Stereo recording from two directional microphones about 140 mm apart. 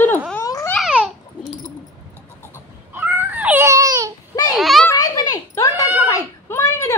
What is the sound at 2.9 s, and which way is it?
Baby cry, 10° right (ahead or behind).